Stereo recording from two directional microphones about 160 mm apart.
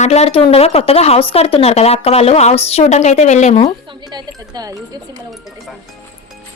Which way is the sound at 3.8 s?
25° right (ahead or behind).